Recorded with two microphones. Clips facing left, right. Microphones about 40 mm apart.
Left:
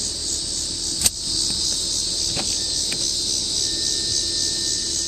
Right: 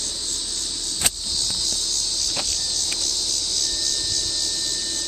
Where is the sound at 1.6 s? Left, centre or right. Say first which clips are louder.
Even; centre.